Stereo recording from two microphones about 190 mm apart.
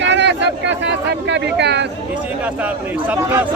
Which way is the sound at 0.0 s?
65° right (ahead or behind).